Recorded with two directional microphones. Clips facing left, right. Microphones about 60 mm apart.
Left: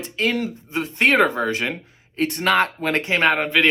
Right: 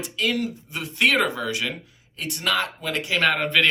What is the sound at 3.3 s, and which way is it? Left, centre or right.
Speech, centre.